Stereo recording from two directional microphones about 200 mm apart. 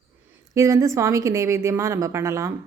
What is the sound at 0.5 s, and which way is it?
A woman's voice, 15° right (ahead or behind).